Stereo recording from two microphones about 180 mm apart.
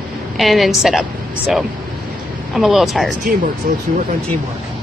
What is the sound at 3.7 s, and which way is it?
Speech, 55° right (ahead or behind).